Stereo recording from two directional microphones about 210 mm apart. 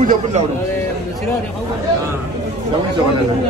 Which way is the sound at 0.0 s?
35° right (ahead or behind).